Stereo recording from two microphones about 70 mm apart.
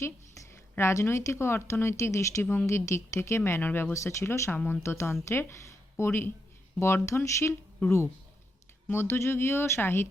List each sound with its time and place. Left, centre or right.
0.0 s a woman's voice: left
3.6 s speech: left
3.9 s speech: left
8.9 s speech: left